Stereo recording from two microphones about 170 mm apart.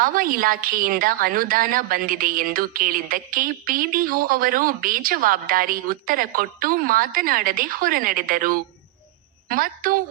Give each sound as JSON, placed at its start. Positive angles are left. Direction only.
{"t": 0.0, "sound": "a woman's voice", "side_deg": -55}